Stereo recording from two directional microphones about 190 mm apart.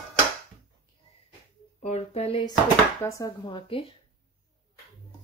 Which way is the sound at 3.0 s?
15° left (ahead or behind).